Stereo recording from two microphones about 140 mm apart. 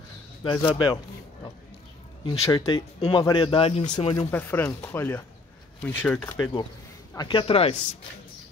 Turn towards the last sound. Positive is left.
turn(degrees=40)  # may be behind; listen again after turning